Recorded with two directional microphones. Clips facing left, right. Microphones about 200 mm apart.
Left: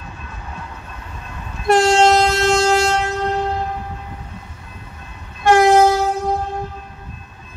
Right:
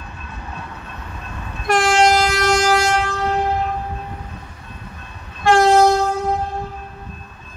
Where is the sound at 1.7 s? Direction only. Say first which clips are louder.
Left 3 dB; 25° left (ahead or behind).